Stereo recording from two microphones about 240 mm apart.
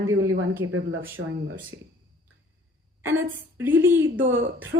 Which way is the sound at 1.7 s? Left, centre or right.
Right.